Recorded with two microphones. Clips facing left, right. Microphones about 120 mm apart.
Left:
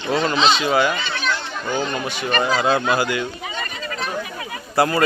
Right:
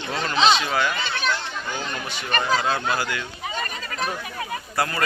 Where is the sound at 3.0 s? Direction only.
15° left (ahead or behind).